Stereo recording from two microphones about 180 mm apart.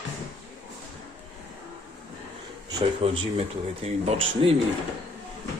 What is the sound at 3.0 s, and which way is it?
A man's voice, 30° right (ahead or behind).